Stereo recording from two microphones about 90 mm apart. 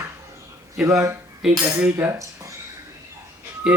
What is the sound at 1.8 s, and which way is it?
Cutlery, 30° right (ahead or behind).